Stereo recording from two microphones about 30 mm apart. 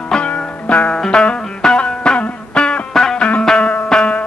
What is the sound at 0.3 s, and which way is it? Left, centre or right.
Music, left.